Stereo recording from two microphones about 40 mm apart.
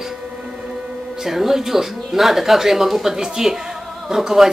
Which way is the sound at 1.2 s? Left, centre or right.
Centre.